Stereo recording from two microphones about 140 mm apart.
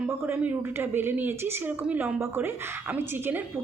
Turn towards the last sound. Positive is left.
turn(degrees=-15)  # may be behind; listen again after turning